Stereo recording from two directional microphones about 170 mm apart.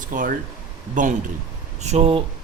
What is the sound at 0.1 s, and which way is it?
Mantra, 50° right (ahead or behind).